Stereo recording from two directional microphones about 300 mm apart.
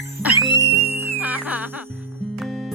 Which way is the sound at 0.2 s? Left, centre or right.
Centre.